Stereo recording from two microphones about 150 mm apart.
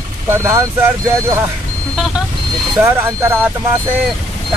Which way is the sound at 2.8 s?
15° right (ahead or behind).